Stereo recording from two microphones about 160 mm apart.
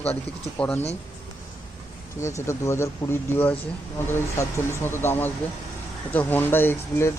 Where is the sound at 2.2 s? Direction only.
20° left (ahead or behind).